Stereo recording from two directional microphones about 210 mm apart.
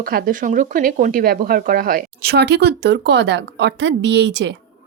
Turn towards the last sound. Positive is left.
turn(degrees=-55)  # may be behind; listen again after turning